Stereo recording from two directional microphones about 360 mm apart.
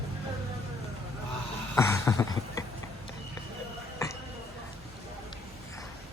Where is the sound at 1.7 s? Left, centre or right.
Centre.